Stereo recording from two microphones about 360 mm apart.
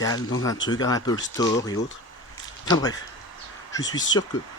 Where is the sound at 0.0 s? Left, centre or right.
Centre.